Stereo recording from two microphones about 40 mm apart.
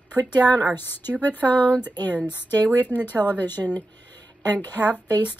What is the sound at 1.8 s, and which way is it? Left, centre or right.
Speech, left.